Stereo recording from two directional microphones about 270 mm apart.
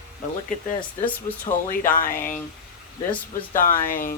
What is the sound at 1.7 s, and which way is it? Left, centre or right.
Speech, left.